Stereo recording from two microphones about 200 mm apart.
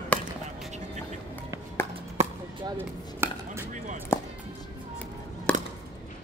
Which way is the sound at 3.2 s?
10° right (ahead or behind).